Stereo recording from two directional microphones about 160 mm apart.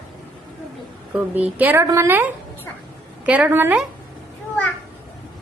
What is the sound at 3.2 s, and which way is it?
Speech, 10° right (ahead or behind).